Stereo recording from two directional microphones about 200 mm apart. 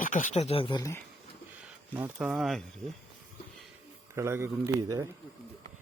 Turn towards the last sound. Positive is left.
turn(degrees=-10)  # may be behind; listen again after turning